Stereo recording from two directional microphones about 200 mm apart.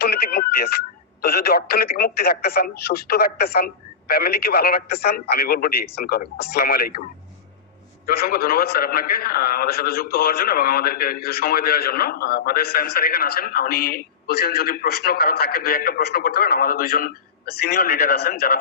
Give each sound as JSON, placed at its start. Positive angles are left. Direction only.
{"t": 0.0, "sound": "a sound", "side_deg": 50}
{"t": 1.2, "sound": "a man's voice", "side_deg": 50}
{"t": 8.0, "sound": "a man's voice", "side_deg": 50}